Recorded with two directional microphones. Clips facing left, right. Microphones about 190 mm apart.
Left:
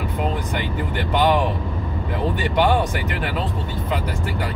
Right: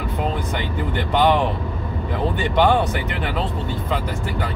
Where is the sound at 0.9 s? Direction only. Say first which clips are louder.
Right 1 dB; 10° left (ahead or behind).